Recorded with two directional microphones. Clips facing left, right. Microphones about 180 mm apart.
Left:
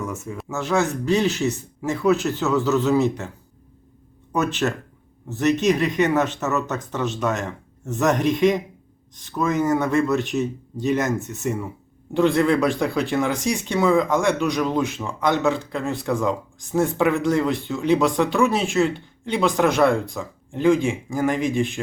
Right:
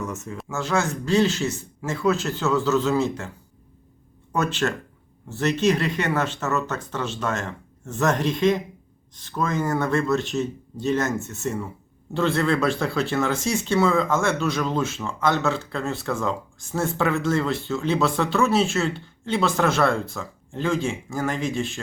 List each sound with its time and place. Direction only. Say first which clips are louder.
0.4 s speech: left 3 dB; 20° left (ahead or behind)
4.3 s speech: left 2 dB; 15° left (ahead or behind)